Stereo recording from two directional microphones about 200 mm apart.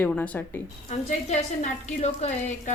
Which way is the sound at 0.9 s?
35° left (ahead or behind).